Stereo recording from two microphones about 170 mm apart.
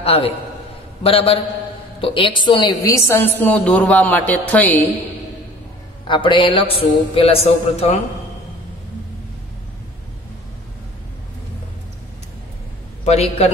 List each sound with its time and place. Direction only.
0.0 s a man's voice: 35° left (ahead or behind); by 4.8 s 10° left (ahead or behind)
6.0 s a man's voice: 30° left (ahead or behind)
13.0 s a man's voice: 40° left (ahead or behind)